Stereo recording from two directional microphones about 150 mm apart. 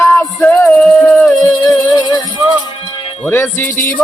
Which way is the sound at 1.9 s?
30° left (ahead or behind).